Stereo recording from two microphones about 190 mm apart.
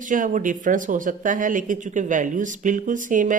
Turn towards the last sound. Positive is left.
turn(degrees=-45)  # may be behind; listen again after turning